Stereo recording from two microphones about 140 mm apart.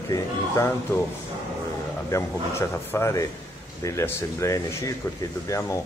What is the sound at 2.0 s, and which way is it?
Speech, 20° left (ahead or behind).